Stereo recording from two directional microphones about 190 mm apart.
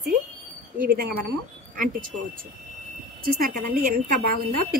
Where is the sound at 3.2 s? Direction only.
50° right (ahead or behind).